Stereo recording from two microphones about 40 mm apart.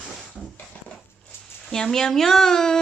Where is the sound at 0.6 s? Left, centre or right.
Left.